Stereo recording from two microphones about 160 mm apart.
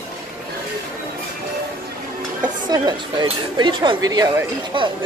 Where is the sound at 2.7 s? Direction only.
25° right (ahead or behind).